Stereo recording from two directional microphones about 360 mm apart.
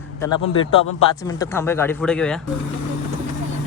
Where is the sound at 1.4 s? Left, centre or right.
Centre.